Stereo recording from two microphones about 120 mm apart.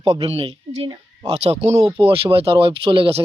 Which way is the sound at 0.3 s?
50° right (ahead or behind).